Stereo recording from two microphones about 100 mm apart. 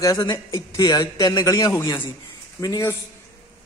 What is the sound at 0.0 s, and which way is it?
A man's voice, 35° left (ahead or behind).